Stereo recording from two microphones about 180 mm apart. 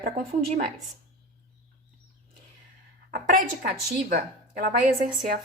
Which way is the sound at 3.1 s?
55° right (ahead or behind).